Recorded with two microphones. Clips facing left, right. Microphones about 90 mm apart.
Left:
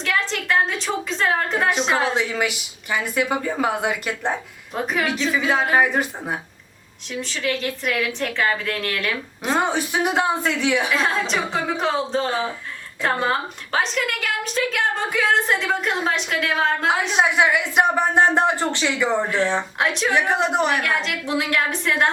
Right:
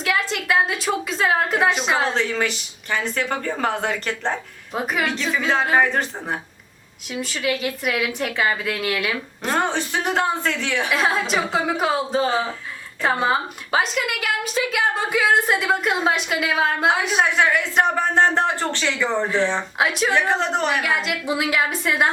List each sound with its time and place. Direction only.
0.0 s a woman's voice: 5° right (ahead or behind)
2.0 s a woman's voice: 10° left (ahead or behind)
4.7 s a woman's voice: 5° right (ahead or behind)
5.0 s a woman's voice: 5° left (ahead or behind)
7.1 s a woman's voice: 5° right (ahead or behind)
9.4 s a woman's voice: 10° left (ahead or behind)
10.9 s a woman's voice: 5° right (ahead or behind)
17.2 s a woman's voice: 15° left (ahead or behind)
19.8 s a woman's voice: 5° right (ahead or behind)
20.1 s a woman's voice: 15° left (ahead or behind)
20.8 s a woman's voice: 5° right (ahead or behind)